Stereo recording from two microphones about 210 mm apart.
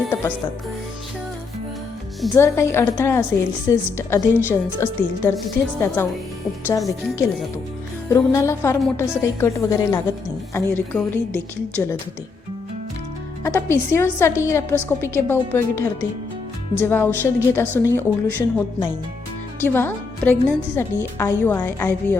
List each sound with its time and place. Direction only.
0.1 s speech: 10° left (ahead or behind)
2.3 s a woman's voice: 10° left (ahead or behind)
13.4 s a woman's voice: 10° left (ahead or behind)
19.6 s a woman's voice: 10° left (ahead or behind)